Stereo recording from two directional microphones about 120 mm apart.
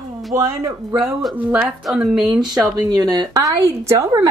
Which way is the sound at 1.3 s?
15° right (ahead or behind).